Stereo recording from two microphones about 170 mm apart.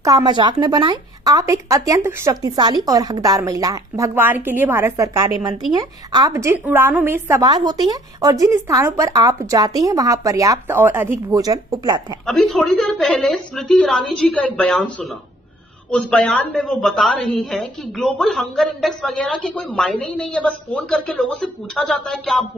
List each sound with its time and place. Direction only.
0.0 s speech: 25° right (ahead or behind)
7.4 s speech: 25° right (ahead or behind)
12.3 s a woman's voice: centre (ahead or behind)